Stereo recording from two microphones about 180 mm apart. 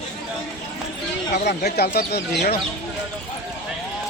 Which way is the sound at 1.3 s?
60° left (ahead or behind).